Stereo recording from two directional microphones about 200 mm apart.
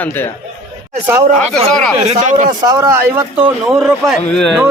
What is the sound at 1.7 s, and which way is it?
Speech, centre (ahead or behind).